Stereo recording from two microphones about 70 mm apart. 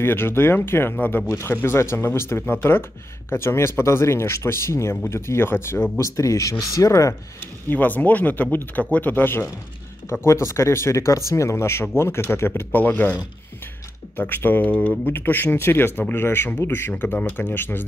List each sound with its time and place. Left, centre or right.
0.0 s speech: left
5.9 s speech: left
7.7 s speech: left
10.2 s speech: left